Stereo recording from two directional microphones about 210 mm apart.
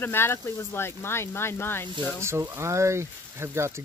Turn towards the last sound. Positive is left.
turn(degrees=-10)  # may be behind; listen again after turning